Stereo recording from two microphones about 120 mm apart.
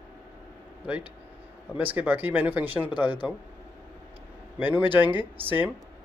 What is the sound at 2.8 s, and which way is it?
Speech, 40° left (ahead or behind).